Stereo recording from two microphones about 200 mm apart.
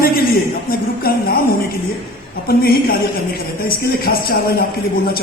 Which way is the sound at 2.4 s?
50° left (ahead or behind).